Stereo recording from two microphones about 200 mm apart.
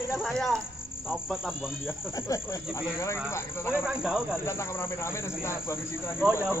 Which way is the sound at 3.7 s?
5° right (ahead or behind).